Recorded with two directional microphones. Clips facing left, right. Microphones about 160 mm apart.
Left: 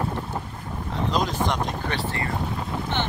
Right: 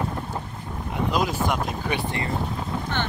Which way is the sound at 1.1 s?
10° right (ahead or behind).